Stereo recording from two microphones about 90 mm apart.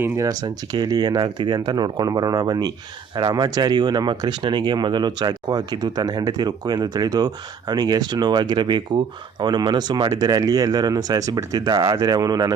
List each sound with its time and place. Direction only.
0.2 s speech: 45° right (ahead or behind)